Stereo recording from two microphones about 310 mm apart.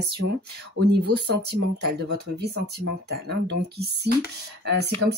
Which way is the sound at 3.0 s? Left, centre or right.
Right.